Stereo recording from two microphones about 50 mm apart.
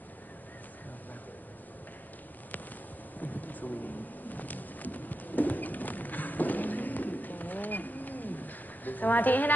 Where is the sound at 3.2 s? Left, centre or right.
Left.